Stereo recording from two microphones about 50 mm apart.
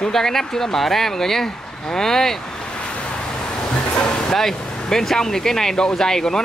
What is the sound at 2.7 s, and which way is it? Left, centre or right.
Vehicle, left.